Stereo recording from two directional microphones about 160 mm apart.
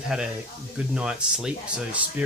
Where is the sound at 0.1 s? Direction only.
5° right (ahead or behind).